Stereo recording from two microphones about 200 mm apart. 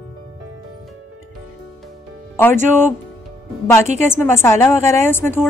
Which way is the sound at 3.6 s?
15° left (ahead or behind).